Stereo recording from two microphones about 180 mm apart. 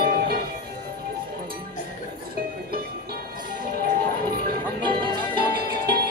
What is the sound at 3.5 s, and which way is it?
Music, 55° right (ahead or behind).